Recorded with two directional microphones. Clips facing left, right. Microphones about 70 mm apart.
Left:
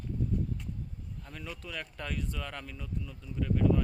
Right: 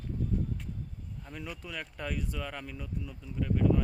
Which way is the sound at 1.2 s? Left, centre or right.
Centre.